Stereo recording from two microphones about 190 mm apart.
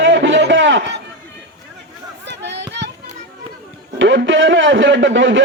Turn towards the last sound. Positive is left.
turn(degrees=-75)  # may be behind; listen again after turning